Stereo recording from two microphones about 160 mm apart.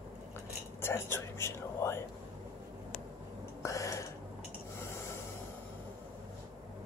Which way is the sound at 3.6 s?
20° left (ahead or behind).